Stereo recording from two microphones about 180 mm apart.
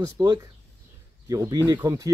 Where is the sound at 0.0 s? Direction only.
25° right (ahead or behind).